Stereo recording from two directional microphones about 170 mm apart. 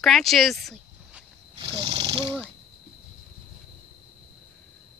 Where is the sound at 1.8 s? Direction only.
35° right (ahead or behind).